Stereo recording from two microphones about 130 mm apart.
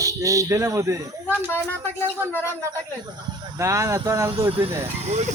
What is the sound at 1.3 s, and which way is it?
Speech, 15° left (ahead or behind).